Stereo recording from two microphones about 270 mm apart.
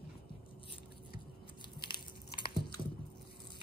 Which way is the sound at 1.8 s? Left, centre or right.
Centre.